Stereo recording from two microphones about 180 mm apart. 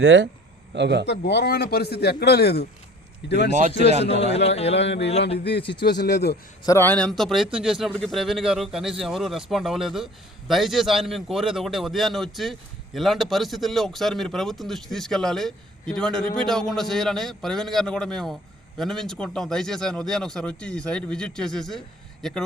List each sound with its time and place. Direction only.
0.0 s speech: 75° right (ahead or behind)
1.0 s a man's voice: 65° left (ahead or behind)
4.1 s a man's voice: 35° left (ahead or behind)
4.7 s speech: 75° left (ahead or behind)
6.7 s a man's voice: 10° left (ahead or behind)